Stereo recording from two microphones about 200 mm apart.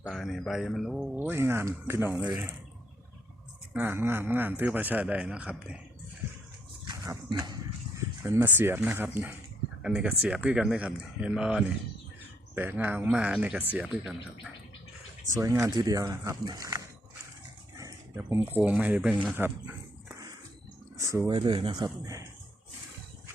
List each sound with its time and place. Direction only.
0.0 s a man's voice: centre (ahead or behind)
3.7 s a man's voice: 10° right (ahead or behind)
6.8 s a sound: 15° right (ahead or behind)
9.8 s a man's voice: 5° right (ahead or behind)
15.4 s a man's voice: 15° right (ahead or behind)
17.7 s a sound: 15° right (ahead or behind)
18.2 s a man's voice: 10° right (ahead or behind)
19.3 s a sound: 10° right (ahead or behind)
21.0 s speech: 15° right (ahead or behind)